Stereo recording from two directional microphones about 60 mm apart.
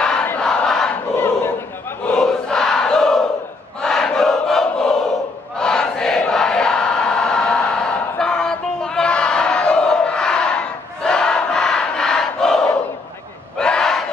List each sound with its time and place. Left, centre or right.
0.4 s crowd: centre
1.1 s battle cry: left
2.1 s crowd: centre
5.6 s a sound: centre
13.6 s battle cry: centre